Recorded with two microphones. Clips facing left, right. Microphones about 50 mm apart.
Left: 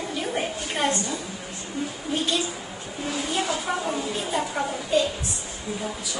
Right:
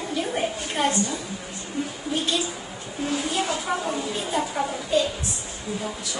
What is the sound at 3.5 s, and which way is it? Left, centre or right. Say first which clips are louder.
A woman's voice: even; centre.